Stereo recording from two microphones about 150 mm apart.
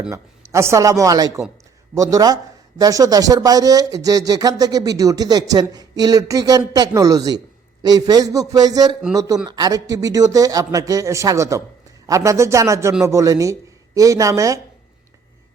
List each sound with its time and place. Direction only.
0.1 s speech: 20° right (ahead or behind)